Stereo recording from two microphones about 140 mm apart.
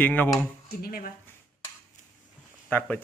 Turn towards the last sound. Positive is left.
turn(degrees=10)  # may be behind; listen again after turning